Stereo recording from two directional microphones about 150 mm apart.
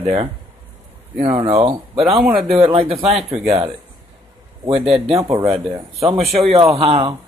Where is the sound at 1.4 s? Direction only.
40° right (ahead or behind).